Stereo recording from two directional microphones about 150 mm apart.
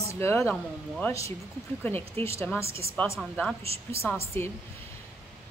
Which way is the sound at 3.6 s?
40° right (ahead or behind).